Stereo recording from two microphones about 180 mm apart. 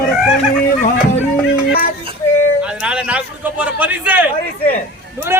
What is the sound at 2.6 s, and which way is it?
A man's voice, 5° right (ahead or behind).